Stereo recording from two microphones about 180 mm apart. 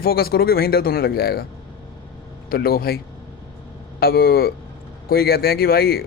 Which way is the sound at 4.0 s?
55° left (ahead or behind).